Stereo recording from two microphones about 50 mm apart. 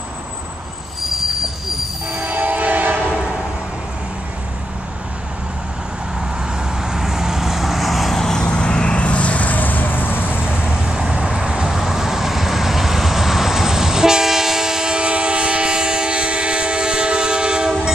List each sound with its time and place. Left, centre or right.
2.2 s train horn: right
6.8 s vehicle: centre
8.2 s vehicle: centre; by 10.4 s left
10.4 s vehicle: centre